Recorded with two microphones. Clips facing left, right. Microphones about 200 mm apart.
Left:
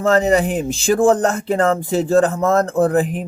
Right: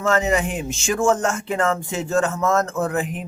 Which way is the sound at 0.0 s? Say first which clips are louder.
Left 5 dB; 35° left (ahead or behind).